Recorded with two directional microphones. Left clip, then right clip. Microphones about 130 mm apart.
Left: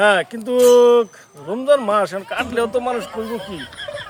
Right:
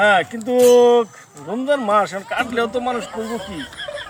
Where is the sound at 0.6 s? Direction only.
Centre (ahead or behind).